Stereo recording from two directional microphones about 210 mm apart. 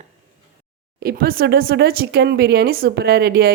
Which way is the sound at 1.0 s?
45° right (ahead or behind).